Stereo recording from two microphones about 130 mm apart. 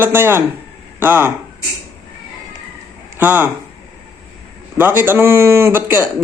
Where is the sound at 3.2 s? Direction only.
15° right (ahead or behind).